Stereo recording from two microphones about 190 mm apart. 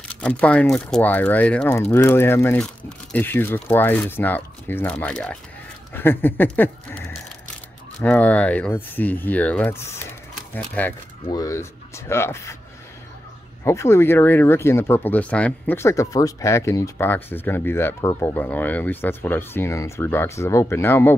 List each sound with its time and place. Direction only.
0.1 s speech: 5° left (ahead or behind)
13.7 s speech: 15° left (ahead or behind)